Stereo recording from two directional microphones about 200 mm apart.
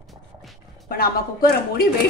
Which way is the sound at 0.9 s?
50° left (ahead or behind).